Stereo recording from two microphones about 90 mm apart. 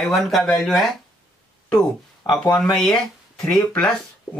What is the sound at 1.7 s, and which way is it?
Speech, 40° left (ahead or behind).